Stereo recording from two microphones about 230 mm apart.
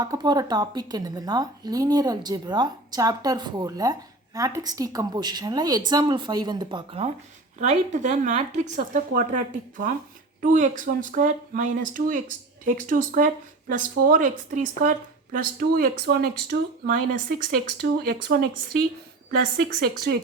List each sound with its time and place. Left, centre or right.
0.0 s a woman's voice: centre; by 18.3 s right
20.1 s speech: right